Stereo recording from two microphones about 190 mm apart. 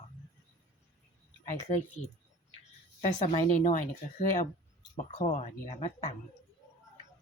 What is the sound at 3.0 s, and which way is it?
Speech, 40° left (ahead or behind).